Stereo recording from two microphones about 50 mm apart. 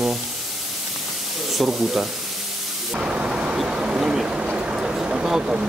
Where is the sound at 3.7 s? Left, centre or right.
Centre.